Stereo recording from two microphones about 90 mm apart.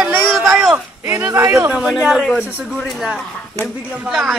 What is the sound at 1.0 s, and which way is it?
Speech, 25° right (ahead or behind).